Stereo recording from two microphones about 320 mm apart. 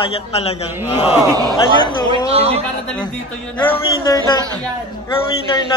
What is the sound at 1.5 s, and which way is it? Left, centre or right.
Speech, centre.